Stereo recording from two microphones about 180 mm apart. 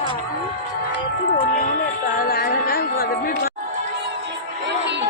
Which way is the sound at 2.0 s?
50° left (ahead or behind).